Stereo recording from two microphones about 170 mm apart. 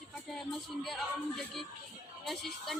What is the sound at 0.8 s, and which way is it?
Speech, centre (ahead or behind).